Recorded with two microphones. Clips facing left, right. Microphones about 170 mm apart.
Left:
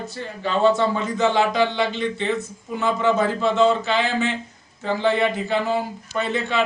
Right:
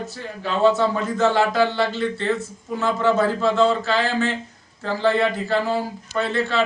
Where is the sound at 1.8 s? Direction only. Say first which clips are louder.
Right 1 dB; 20° left (ahead or behind).